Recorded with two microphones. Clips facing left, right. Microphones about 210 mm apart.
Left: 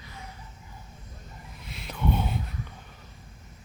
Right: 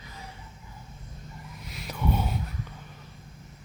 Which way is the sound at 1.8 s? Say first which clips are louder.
Left 1 dB; 5° right (ahead or behind).